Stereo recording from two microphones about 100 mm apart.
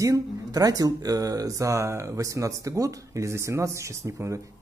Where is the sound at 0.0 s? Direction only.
35° right (ahead or behind).